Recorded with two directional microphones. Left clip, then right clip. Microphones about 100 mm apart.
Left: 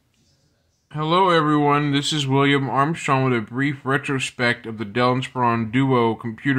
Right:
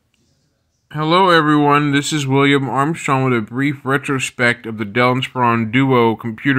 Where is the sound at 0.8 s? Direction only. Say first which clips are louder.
Right 5 dB; 25° right (ahead or behind).